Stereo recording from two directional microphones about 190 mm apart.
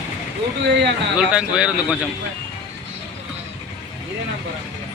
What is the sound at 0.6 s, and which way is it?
Speech, 65° right (ahead or behind).